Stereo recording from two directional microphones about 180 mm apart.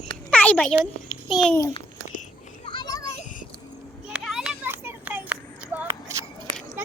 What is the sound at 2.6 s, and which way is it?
Children playing, 25° left (ahead or behind).